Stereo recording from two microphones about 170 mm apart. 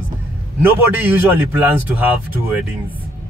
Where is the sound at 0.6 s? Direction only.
10° right (ahead or behind).